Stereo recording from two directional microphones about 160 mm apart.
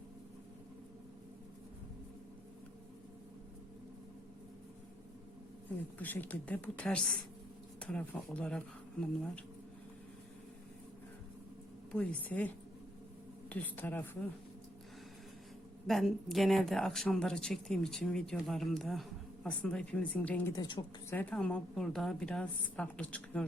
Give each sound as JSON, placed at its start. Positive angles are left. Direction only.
{"t": 6.0, "sound": "a woman's voice", "side_deg": 10}
{"t": 11.9, "sound": "a woman's voice", "side_deg": 10}
{"t": 13.5, "sound": "a woman's voice", "side_deg": 10}
{"t": 15.9, "sound": "speech", "side_deg": 0}
{"t": 20.6, "sound": "a woman's voice", "side_deg": 30}
{"t": 21.1, "sound": "a woman's voice", "side_deg": 10}